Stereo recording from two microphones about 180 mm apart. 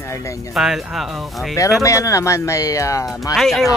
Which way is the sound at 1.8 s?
15° left (ahead or behind).